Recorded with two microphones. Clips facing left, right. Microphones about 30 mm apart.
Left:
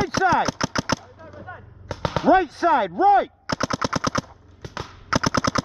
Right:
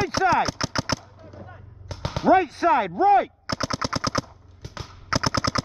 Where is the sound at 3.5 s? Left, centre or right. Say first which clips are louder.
Left 3 dB; left.